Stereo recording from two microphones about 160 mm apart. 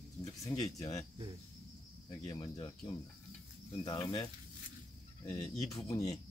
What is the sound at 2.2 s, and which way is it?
Speech, 25° left (ahead or behind).